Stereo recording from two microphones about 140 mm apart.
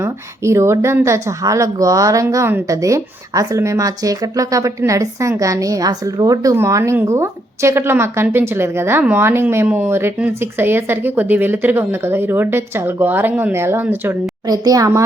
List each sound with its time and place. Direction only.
0.0 s a woman's voice: 20° right (ahead or behind)
14.4 s a woman's voice: 25° right (ahead or behind)